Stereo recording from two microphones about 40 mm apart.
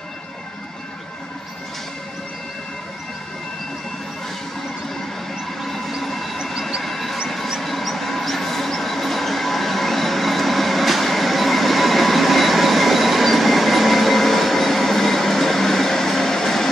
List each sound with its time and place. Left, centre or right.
5.6 s train: centre
6.8 s a sound: centre
7.4 s train: centre